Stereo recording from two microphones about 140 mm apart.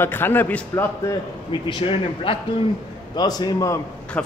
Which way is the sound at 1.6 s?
40° left (ahead or behind).